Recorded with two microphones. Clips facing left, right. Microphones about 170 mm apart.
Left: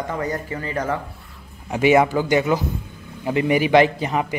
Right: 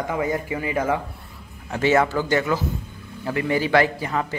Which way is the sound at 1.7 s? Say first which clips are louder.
Left 3 dB; 15° left (ahead or behind).